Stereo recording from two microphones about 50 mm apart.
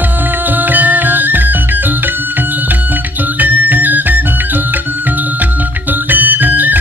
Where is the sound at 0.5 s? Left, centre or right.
Right.